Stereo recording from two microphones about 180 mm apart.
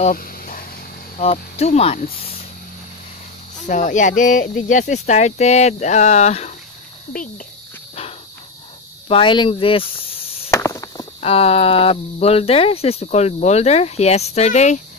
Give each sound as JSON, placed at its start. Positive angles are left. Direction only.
{"t": 0.1, "sound": "a sound", "side_deg": 50}
{"t": 1.1, "sound": "speech", "side_deg": 35}
{"t": 3.6, "sound": "speech", "side_deg": 45}
{"t": 7.1, "sound": "speech", "side_deg": 50}
{"t": 9.1, "sound": "speech", "side_deg": 25}
{"t": 10.5, "sound": "chop", "side_deg": 15}
{"t": 11.1, "sound": "speech", "side_deg": 35}